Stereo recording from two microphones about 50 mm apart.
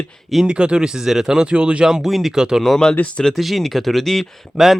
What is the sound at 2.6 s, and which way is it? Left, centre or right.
Speech, centre.